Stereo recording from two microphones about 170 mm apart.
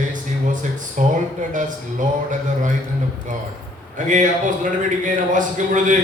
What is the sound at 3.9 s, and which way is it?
Speech, 50° right (ahead or behind).